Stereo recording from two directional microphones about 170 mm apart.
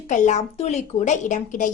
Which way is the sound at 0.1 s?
45° left (ahead or behind).